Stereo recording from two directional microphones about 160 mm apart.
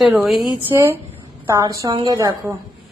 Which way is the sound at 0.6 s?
15° right (ahead or behind).